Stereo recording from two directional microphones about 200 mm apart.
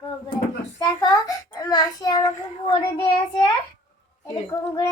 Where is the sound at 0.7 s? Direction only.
20° left (ahead or behind).